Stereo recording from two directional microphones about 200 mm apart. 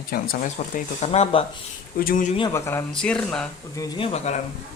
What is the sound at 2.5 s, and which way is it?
Speech, 10° left (ahead or behind).